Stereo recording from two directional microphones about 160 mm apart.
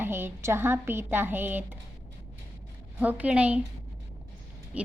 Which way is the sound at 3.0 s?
10° right (ahead or behind).